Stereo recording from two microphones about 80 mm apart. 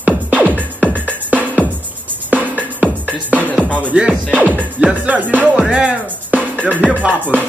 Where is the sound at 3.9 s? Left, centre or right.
Centre.